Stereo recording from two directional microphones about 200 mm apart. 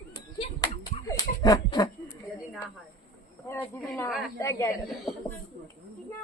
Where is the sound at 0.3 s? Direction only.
20° left (ahead or behind).